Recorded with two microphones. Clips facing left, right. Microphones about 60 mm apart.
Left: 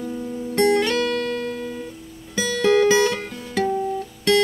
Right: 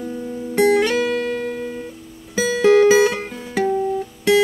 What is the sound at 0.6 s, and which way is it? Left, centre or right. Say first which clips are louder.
Music: right 3 dB; centre.